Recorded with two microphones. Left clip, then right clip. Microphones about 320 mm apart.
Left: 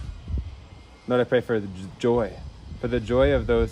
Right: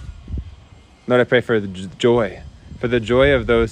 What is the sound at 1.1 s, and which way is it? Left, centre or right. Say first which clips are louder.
Speech: right 6 dB; right.